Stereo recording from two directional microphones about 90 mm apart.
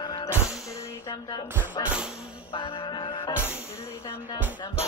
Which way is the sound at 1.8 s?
50° left (ahead or behind).